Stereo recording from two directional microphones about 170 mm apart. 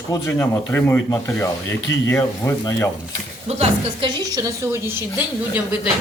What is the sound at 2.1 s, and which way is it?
Speech, 15° left (ahead or behind).